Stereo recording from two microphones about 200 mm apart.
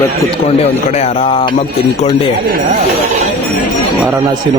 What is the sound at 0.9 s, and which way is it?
Speech, 30° left (ahead or behind).